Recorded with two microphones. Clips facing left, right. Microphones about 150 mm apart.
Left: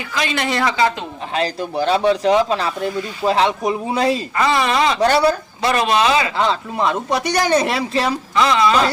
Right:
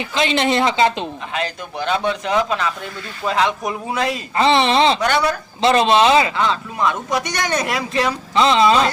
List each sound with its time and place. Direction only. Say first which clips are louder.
0.1 s speech: right 3 dB; 25° right (ahead or behind)
1.3 s speech: left 4 dB; 35° left (ahead or behind)
4.4 s speech: right 5 dB; 25° right (ahead or behind)
4.9 s speech: left 4 dB; 30° left (ahead or behind)
5.6 s speech: right 3 dB; 25° right (ahead or behind)
6.3 s speech: left 2 dB; 30° left (ahead or behind)
8.4 s speech: right 2 dB; 25° right (ahead or behind)